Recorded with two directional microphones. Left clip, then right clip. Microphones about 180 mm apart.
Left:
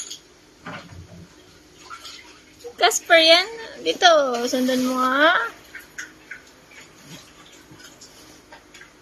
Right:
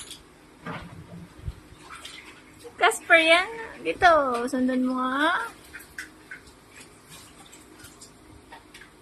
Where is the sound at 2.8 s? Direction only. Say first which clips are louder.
Left 4 dB; 40° left (ahead or behind).